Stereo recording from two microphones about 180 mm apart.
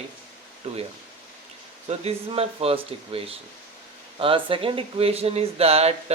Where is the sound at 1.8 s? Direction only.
35° right (ahead or behind).